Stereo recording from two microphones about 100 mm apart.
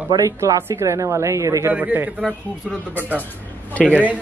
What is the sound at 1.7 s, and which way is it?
Speech, 15° right (ahead or behind).